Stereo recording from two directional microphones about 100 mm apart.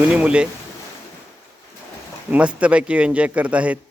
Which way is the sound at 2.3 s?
15° right (ahead or behind).